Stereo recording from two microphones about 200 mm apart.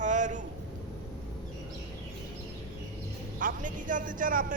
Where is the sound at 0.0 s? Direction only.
40° right (ahead or behind).